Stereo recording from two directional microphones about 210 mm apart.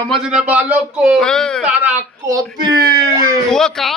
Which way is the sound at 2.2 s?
15° right (ahead or behind).